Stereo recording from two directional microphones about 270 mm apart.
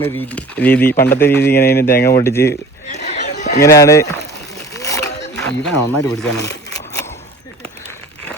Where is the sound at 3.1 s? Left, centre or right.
Left.